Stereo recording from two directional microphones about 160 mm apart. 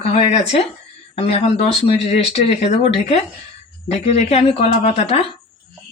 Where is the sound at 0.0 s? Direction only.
40° left (ahead or behind).